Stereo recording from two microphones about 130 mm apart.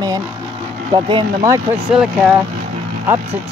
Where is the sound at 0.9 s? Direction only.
40° right (ahead or behind).